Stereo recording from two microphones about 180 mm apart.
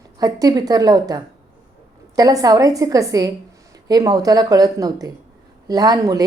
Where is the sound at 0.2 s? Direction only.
20° right (ahead or behind).